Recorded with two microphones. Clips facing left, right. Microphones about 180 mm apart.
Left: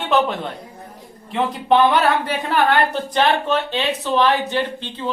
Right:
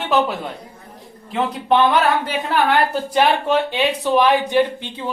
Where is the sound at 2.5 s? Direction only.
10° right (ahead or behind).